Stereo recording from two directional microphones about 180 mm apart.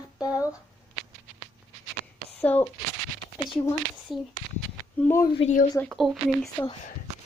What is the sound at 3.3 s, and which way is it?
Speech, 25° left (ahead or behind).